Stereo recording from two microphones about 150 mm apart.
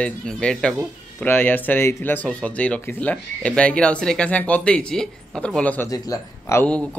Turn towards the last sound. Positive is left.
turn(degrees=5)  # may be behind; listen again after turning